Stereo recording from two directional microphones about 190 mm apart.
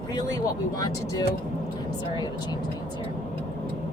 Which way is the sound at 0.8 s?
20° left (ahead or behind).